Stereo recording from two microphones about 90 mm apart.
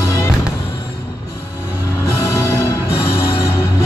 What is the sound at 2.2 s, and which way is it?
Music, 35° left (ahead or behind).